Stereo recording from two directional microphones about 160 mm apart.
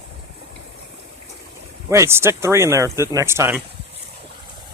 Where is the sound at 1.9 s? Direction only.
15° right (ahead or behind).